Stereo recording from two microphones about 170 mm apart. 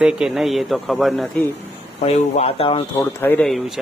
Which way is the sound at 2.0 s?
40° left (ahead or behind).